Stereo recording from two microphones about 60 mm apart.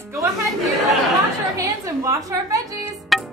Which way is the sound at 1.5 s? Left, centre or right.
Right.